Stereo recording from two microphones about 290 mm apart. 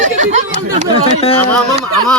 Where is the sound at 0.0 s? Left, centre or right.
Right.